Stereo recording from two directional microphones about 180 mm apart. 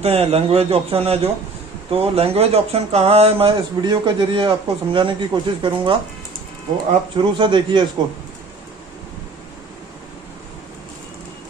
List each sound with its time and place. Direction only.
0.0 s speech: 35° right (ahead or behind)
7.2 s a man's voice: 25° right (ahead or behind)